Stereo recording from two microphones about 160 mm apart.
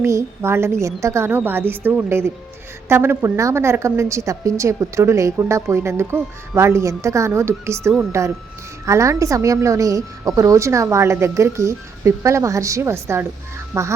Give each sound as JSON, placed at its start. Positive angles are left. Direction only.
{"t": 0.0, "sound": "a woman's voice", "side_deg": -15}